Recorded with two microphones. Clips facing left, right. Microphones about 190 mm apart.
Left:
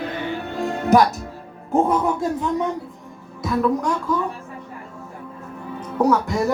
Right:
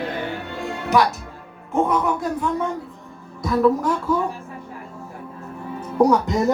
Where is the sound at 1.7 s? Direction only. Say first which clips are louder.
Left 2 dB; 30° left (ahead or behind).